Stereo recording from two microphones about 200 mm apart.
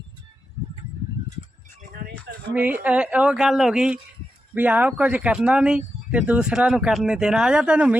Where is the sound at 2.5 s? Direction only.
10° right (ahead or behind).